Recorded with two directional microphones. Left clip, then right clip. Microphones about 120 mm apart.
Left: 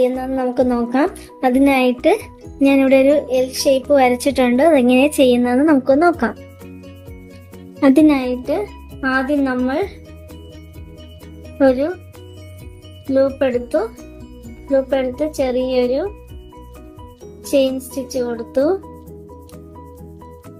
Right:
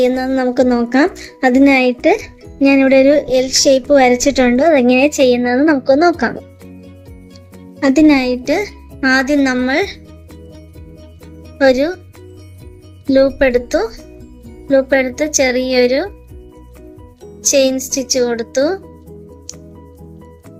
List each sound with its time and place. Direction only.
0.0 s speech: 45° right (ahead or behind)
3.8 s a woman's voice: 30° right (ahead or behind)
7.8 s a child's voice: 25° right (ahead or behind)
8.0 s a woman's voice: 45° right (ahead or behind); by 9.9 s 65° right (ahead or behind)
11.6 s speech: 65° right (ahead or behind)
13.1 s speech: 65° right (ahead or behind)
17.5 s speech: 60° right (ahead or behind)